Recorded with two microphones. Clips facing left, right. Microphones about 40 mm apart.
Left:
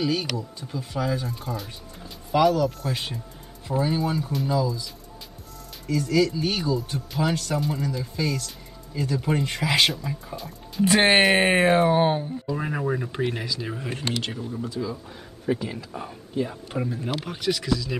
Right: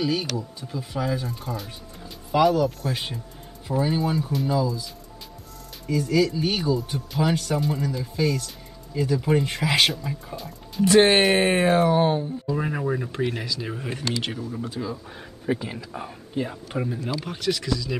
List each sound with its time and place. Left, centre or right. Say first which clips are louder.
0.0 s speech: even; centre
11.4 s speech: left 1 dB; centre
12.4 s speech: even; centre
14.8 s speech: left 2 dB; right
15.4 s speech: left 1 dB; centre